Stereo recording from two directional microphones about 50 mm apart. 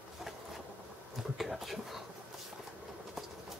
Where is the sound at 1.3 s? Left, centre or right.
Centre.